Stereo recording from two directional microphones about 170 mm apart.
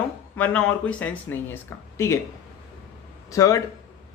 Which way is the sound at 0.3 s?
10° left (ahead or behind).